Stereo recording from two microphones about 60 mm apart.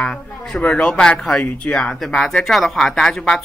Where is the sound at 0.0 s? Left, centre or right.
Centre.